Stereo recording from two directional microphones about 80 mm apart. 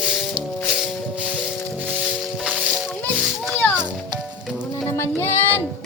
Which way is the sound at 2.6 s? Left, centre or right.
Centre.